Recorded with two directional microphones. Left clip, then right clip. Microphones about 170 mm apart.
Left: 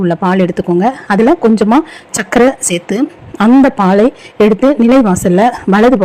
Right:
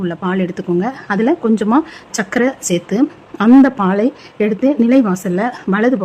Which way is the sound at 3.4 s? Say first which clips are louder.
Left 2 dB; 10° left (ahead or behind).